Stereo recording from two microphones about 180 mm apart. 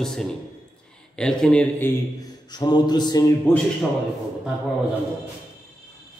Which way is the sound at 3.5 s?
10° left (ahead or behind).